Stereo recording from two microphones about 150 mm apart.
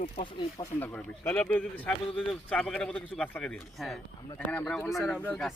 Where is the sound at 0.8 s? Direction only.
10° left (ahead or behind).